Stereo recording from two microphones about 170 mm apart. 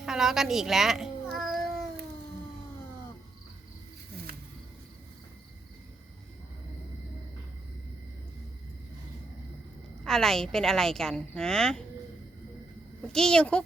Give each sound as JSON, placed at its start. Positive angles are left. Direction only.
{"t": 0.0, "sound": "cat", "side_deg": -5}
{"t": 10.0, "sound": "a woman's voice", "side_deg": 5}
{"t": 13.0, "sound": "a woman's voice", "side_deg": 5}